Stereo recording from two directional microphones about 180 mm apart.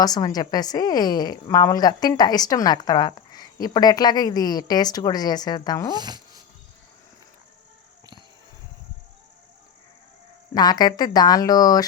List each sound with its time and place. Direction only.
0.0 s a woman's voice: 20° left (ahead or behind)
5.9 s speech: 25° right (ahead or behind)
10.5 s a woman's voice: 20° left (ahead or behind)